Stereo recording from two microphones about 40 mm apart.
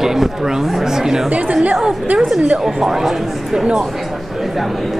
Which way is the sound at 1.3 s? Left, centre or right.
Right.